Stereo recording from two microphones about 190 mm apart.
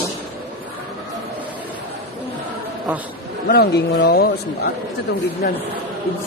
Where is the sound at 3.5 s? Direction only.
55° left (ahead or behind).